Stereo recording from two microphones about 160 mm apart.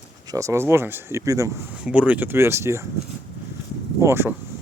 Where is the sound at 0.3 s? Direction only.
20° right (ahead or behind).